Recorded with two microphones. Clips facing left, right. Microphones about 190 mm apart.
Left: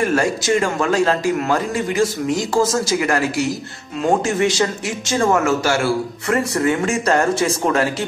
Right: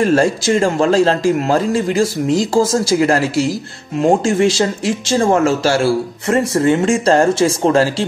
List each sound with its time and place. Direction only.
0.0 s a man's voice: 30° right (ahead or behind)